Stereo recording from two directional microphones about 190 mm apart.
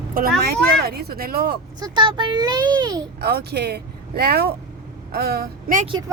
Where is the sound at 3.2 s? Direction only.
55° right (ahead or behind).